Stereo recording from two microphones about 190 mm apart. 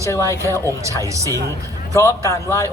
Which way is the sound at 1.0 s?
15° right (ahead or behind).